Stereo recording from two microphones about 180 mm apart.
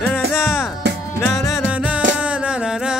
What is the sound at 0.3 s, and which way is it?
Music, 5° right (ahead or behind).